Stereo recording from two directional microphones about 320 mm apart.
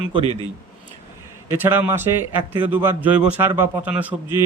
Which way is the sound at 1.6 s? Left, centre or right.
Centre.